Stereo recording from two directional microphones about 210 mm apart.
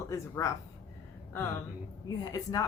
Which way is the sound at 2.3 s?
15° left (ahead or behind).